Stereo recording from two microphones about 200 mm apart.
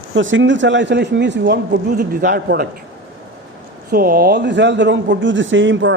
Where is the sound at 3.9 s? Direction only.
45° right (ahead or behind).